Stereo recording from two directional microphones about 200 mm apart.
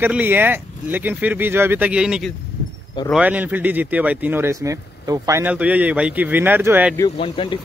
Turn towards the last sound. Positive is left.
turn(degrees=25)  # may be behind; listen again after turning